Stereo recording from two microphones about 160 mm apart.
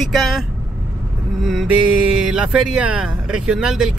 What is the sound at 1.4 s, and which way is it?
Speech, centre (ahead or behind).